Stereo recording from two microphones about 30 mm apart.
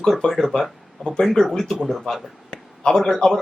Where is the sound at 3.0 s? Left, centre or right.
Centre.